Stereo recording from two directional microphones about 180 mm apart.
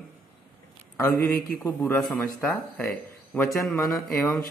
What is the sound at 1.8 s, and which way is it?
Speech, 5° left (ahead or behind).